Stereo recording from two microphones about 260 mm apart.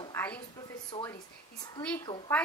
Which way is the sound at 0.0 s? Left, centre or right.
Centre.